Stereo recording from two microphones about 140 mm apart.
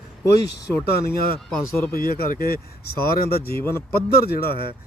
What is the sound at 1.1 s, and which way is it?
Speech, 15° left (ahead or behind).